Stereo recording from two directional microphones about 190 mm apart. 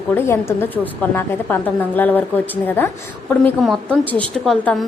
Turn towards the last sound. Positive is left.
turn(degrees=0)  # may be behind; listen again after turning